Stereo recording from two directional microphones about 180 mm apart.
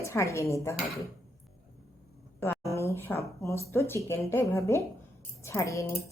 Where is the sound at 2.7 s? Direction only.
15° left (ahead or behind).